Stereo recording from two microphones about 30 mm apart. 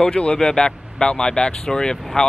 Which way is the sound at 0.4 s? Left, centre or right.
Left.